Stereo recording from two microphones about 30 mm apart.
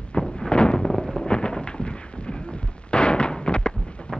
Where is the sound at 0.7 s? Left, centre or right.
Centre.